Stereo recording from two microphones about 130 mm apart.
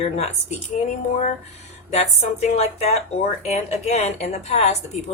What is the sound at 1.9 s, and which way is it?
Speech, 60° left (ahead or behind).